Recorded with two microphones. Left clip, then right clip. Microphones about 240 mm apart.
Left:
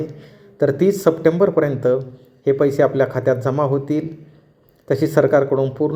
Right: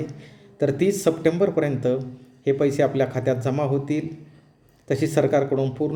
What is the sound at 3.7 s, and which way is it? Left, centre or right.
Speech, right.